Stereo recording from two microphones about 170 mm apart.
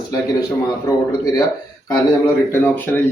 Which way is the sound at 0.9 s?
20° left (ahead or behind).